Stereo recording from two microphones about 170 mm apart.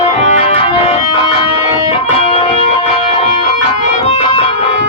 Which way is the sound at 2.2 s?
35° left (ahead or behind).